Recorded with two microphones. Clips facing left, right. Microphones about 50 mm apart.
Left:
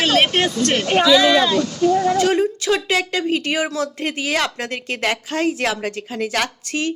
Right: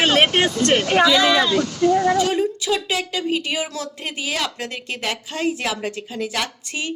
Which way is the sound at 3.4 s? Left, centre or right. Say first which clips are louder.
Left 4 dB; left.